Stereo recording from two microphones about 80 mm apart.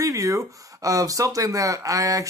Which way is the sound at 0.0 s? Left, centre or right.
Right.